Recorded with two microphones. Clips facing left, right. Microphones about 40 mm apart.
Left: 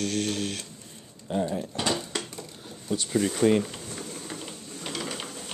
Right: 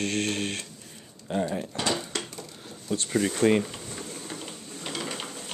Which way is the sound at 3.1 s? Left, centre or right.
Centre.